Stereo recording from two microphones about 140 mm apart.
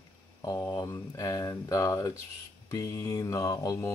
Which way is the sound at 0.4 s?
25° left (ahead or behind).